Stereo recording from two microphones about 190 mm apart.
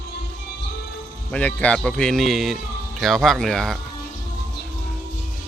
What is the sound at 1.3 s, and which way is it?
Speech, 5° left (ahead or behind).